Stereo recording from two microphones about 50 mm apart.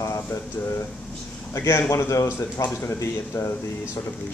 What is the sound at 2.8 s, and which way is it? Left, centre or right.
Speech, left.